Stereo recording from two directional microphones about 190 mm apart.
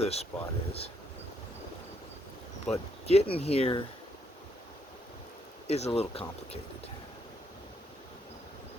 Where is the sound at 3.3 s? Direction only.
30° left (ahead or behind).